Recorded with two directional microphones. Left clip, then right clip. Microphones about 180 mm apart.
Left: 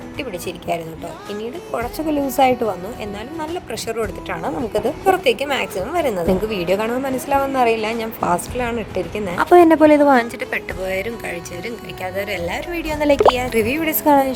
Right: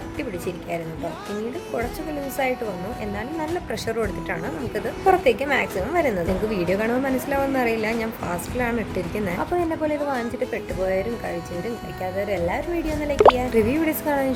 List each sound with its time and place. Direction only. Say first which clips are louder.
0.2 s speech: left 3 dB; 35° left (ahead or behind)
2.3 s speech: left 9 dB; 35° left (ahead or behind)
3.7 s speech: left 2 dB; 30° left (ahead or behind)
9.5 s a woman's voice: left 16 dB; 60° left (ahead or behind)
12.0 s speech: left 1 dB; 50° left (ahead or behind)